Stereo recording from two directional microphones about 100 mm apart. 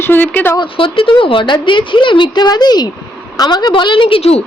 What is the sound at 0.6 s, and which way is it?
A woman's voice, 60° left (ahead or behind).